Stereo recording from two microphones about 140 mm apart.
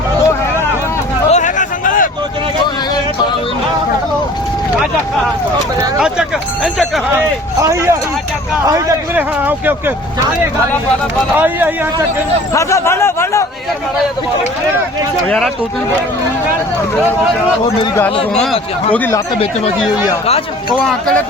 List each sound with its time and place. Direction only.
1.3 s a sound: 60° left (ahead or behind)
6.0 s speech: 5° right (ahead or behind)
7.6 s speech: 20° right (ahead or behind)
9.1 s speech: 15° right (ahead or behind)
11.3 s speech: 15° right (ahead or behind)
12.5 s a man's voice: 20° left (ahead or behind)
18.3 s speech: 5° left (ahead or behind)